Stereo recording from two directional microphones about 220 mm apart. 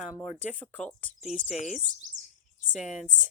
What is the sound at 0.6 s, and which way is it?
Speech, 5° left (ahead or behind).